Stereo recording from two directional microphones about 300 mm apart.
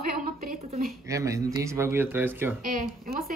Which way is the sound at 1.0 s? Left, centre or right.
Centre.